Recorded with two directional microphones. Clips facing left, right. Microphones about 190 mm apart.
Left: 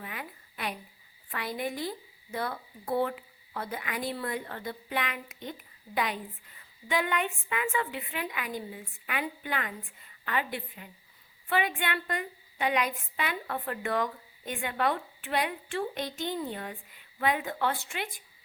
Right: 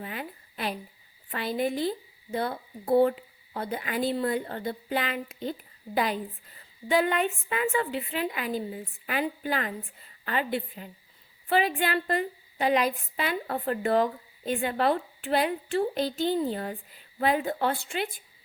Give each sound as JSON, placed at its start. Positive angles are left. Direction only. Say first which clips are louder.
{"t": 0.0, "sound": "a woman's voice", "louder": "right 5 dB", "side_deg": -30}